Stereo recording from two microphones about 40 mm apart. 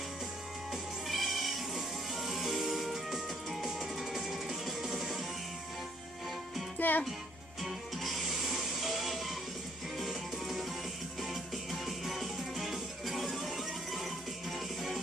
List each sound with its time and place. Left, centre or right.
1.0 s cat: centre
3.6 s music: centre
6.8 s speech: left
7.6 s music: centre